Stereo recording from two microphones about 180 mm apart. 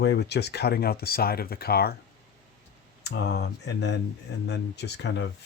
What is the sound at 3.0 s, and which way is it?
Speech, 70° left (ahead or behind).